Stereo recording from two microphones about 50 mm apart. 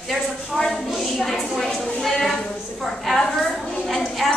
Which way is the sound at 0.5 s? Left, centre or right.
Centre.